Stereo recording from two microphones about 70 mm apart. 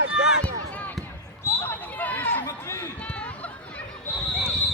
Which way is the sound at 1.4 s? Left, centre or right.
Left.